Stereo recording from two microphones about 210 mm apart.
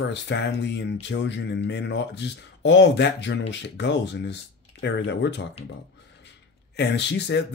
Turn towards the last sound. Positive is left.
turn(degrees=55)  # may be behind; listen again after turning